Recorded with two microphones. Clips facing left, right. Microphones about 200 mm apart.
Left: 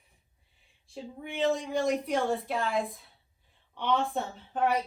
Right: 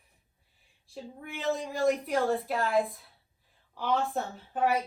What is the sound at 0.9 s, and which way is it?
A woman's voice, centre (ahead or behind).